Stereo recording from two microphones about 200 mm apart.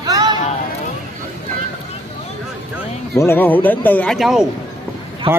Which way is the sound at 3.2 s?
10° left (ahead or behind).